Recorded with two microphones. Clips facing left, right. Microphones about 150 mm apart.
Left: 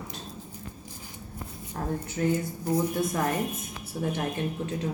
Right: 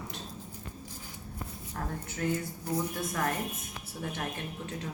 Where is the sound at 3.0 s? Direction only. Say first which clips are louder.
Left 5 dB; 15° left (ahead or behind).